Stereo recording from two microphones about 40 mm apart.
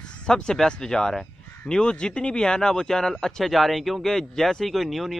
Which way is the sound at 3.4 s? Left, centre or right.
Centre.